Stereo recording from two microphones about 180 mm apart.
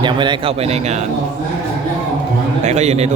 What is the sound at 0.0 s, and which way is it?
A man's voice, 25° right (ahead or behind).